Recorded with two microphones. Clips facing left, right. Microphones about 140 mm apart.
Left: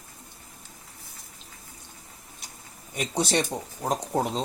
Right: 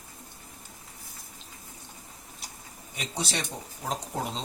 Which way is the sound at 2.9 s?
45° left (ahead or behind).